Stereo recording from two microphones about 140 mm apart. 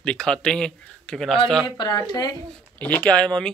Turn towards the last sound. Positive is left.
turn(degrees=5)  # may be behind; listen again after turning